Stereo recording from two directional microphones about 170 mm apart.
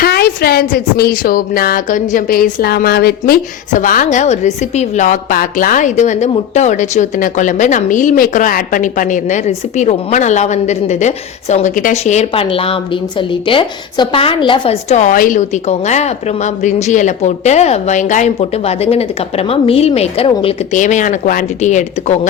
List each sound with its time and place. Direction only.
0.0 s speech: 65° left (ahead or behind)
3.7 s a woman's voice: 50° left (ahead or behind); by 20.6 s 35° left (ahead or behind)
20.7 s a woman's voice: 45° left (ahead or behind)